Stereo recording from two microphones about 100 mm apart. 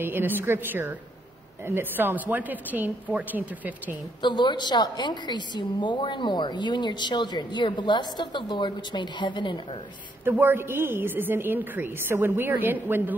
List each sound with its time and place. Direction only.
0.0 s a woman's voice: 20° right (ahead or behind)
4.2 s a woman's voice: 50° left (ahead or behind)
10.2 s a woman's voice: 20° right (ahead or behind)